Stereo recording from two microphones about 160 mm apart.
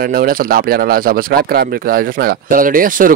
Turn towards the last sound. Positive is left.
turn(degrees=-60)  # may be behind; listen again after turning